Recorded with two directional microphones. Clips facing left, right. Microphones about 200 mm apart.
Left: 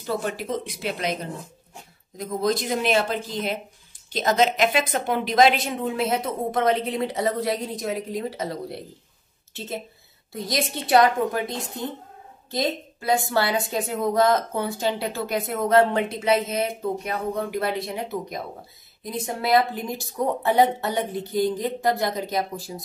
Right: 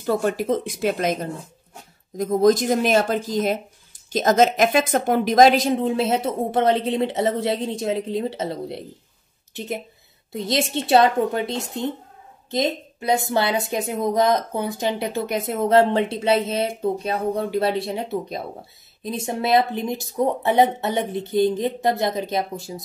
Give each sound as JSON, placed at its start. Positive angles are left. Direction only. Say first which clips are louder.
{"t": 0.0, "sound": "speech", "louder": "right 6 dB", "side_deg": -45}
{"t": 2.1, "sound": "a woman's voice", "louder": "right 8 dB", "side_deg": -45}